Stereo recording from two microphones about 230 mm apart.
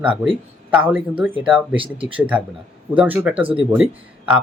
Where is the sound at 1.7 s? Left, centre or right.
Right.